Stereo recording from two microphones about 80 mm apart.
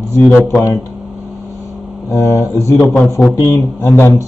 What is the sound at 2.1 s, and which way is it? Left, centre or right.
A man's voice, left.